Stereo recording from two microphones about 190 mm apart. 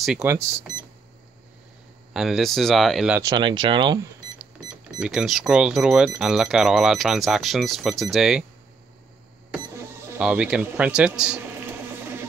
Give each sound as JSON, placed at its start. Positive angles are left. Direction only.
{"t": 0.2, "sound": "speech", "side_deg": -15}
{"t": 2.1, "sound": "speech", "side_deg": 0}
{"t": 3.2, "sound": "speech", "side_deg": -20}
{"t": 5.0, "sound": "speech", "side_deg": 0}
{"t": 10.1, "sound": "speech", "side_deg": -5}